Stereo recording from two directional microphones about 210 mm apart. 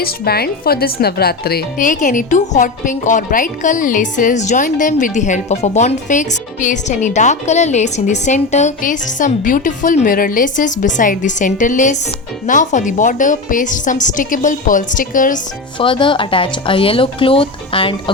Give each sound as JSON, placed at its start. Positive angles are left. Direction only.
{"t": 0.0, "sound": "speech", "side_deg": 50}
{"t": 15.8, "sound": "speech", "side_deg": 25}